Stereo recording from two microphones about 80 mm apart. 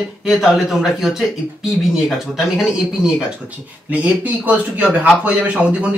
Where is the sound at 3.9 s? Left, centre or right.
Centre.